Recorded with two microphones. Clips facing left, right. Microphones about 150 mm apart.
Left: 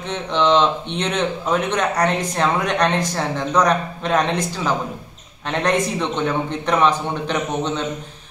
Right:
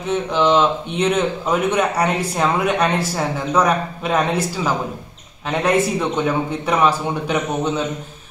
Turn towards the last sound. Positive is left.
turn(degrees=-10)  # may be behind; listen again after turning